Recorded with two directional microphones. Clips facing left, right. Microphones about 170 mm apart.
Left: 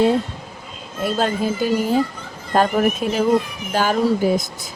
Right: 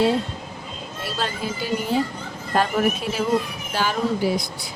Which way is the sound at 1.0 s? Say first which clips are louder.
Left 8 dB; 50° left (ahead or behind).